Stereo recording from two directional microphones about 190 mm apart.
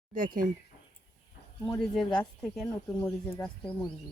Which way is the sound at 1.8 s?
5° left (ahead or behind).